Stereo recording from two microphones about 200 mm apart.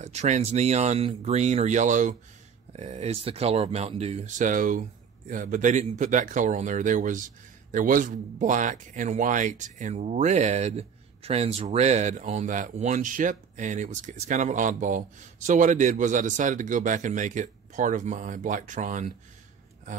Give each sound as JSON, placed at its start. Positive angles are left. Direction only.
{"t": 0.0, "sound": "speech", "side_deg": -35}